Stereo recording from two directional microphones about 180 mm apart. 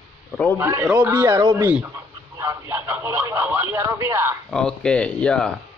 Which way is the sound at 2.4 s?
15° right (ahead or behind).